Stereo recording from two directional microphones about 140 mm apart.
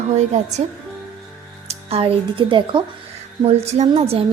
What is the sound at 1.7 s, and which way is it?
Speech, 45° right (ahead or behind).